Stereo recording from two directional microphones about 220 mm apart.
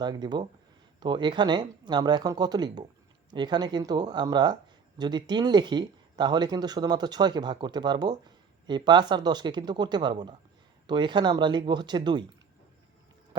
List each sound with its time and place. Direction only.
0.0 s speech: 20° right (ahead or behind)